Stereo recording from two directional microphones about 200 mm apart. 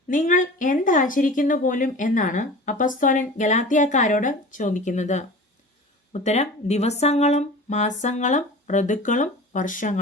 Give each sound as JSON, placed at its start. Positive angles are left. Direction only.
{"t": 0.1, "sound": "a woman's voice", "side_deg": 40}